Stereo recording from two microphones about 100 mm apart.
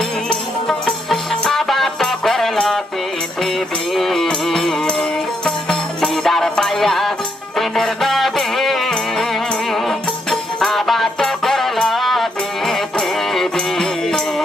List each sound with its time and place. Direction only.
0.3 s music: 5° left (ahead or behind)
3.9 s music: centre (ahead or behind)